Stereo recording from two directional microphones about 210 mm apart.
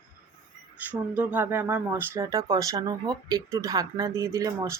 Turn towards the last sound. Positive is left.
turn(degrees=-15)  # may be behind; listen again after turning